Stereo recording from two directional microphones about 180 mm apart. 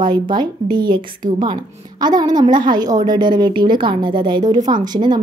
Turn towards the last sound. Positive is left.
turn(degrees=-25)  # may be behind; listen again after turning